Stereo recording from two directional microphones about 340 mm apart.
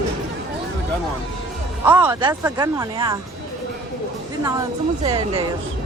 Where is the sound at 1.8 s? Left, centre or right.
Centre.